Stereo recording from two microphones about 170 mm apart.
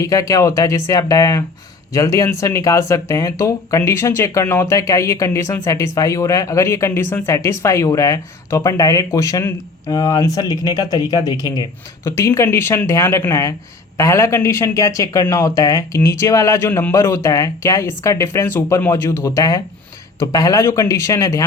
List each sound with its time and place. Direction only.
0.0 s speech: 20° left (ahead or behind)